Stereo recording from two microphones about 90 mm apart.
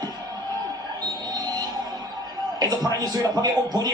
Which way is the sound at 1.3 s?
50° right (ahead or behind).